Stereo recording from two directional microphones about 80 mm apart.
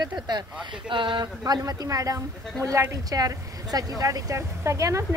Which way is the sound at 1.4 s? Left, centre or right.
Right.